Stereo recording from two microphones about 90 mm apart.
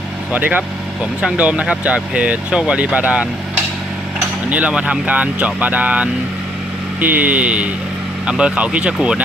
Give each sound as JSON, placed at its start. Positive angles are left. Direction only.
{"t": 0.3, "sound": "speech", "side_deg": -20}
{"t": 4.4, "sound": "speech", "side_deg": -15}